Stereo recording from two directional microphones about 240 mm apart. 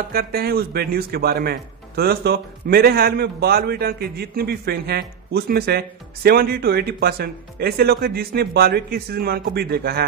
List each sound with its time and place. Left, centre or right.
0.1 s speech: right